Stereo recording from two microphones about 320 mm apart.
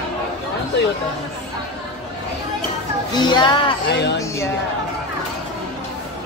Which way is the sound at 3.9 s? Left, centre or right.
Left.